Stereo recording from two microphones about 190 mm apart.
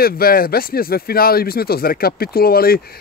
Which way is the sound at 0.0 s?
50° left (ahead or behind).